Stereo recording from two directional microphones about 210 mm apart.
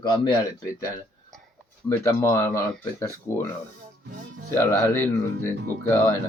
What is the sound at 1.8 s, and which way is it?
Speech, 15° left (ahead or behind).